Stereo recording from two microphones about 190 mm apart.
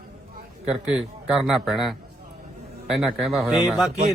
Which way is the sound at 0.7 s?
5° right (ahead or behind).